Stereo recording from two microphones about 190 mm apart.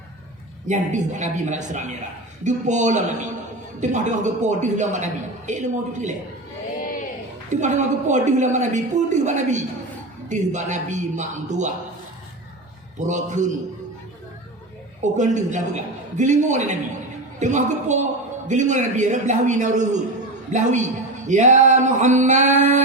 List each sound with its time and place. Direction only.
0.7 s a woman's voice: 40° right (ahead or behind)
7.5 s a woman's voice: 40° right (ahead or behind)
13.0 s a woman's voice: 40° right (ahead or behind)
15.0 s a woman's voice: 40° right (ahead or behind)